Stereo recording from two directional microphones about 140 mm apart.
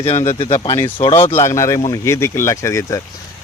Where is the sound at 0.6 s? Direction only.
30° left (ahead or behind).